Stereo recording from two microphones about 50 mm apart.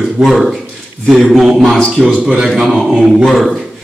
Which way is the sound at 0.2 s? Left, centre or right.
Centre.